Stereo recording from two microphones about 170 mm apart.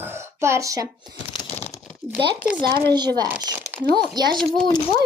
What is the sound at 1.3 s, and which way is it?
Crumpling, 30° left (ahead or behind).